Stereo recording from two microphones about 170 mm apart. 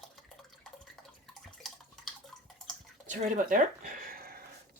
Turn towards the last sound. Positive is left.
turn(degrees=-60)  # may be behind; listen again after turning